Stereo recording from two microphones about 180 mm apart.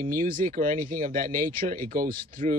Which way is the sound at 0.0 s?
50° right (ahead or behind).